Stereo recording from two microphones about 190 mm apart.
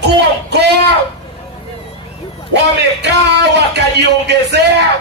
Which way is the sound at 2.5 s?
65° right (ahead or behind).